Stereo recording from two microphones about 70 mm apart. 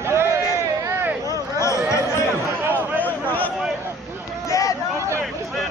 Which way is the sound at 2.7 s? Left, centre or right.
Left.